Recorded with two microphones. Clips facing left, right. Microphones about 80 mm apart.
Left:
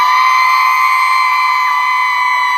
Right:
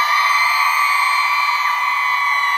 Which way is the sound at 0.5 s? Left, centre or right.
Centre.